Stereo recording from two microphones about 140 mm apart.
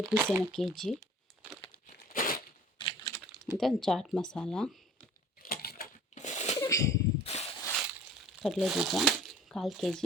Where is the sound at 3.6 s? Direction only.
Centre (ahead or behind).